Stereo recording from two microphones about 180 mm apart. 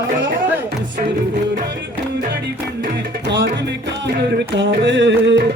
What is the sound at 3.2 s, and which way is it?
Music, 70° right (ahead or behind).